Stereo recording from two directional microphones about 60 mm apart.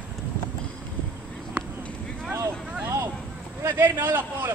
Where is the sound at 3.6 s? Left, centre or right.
Right.